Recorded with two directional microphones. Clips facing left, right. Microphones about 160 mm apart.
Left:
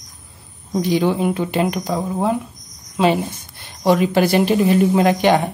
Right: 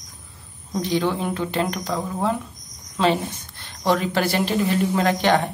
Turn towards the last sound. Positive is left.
turn(degrees=15)  # may be behind; listen again after turning